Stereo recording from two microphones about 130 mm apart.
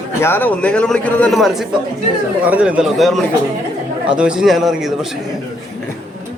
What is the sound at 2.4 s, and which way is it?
A man's voice, 10° right (ahead or behind).